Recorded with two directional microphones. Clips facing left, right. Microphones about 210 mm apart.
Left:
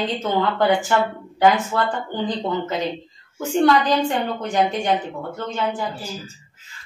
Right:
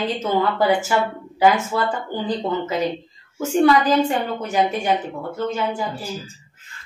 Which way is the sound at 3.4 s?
5° right (ahead or behind).